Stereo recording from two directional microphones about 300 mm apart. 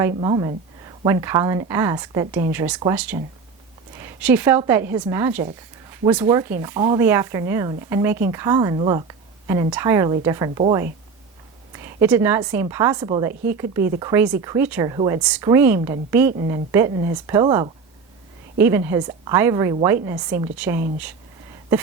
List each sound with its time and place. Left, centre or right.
0.1 s speech: centre